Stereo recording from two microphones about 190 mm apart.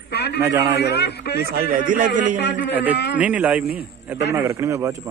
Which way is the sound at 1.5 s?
50° right (ahead or behind).